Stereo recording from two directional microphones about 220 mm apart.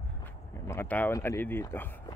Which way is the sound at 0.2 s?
10° left (ahead or behind).